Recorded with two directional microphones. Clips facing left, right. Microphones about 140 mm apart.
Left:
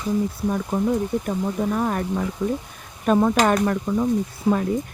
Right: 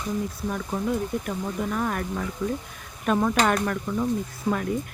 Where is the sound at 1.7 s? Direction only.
30° left (ahead or behind).